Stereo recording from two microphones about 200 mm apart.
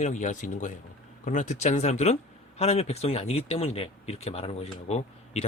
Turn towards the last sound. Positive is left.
turn(degrees=35)  # may be behind; listen again after turning